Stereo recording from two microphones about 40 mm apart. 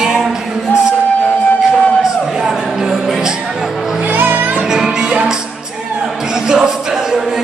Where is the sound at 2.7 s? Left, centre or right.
Centre.